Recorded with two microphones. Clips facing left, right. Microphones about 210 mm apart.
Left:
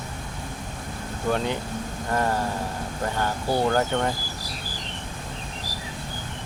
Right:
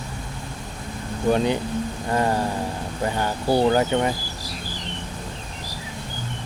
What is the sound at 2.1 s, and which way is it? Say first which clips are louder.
Speech: right 2 dB; 15° right (ahead or behind).